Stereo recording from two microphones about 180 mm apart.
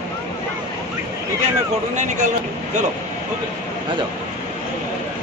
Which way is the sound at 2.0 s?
40° right (ahead or behind).